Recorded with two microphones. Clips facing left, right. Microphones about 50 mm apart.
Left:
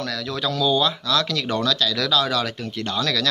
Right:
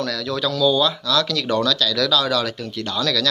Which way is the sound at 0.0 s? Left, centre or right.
Centre.